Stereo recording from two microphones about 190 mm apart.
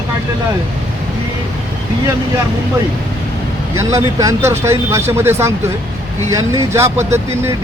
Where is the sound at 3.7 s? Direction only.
15° right (ahead or behind).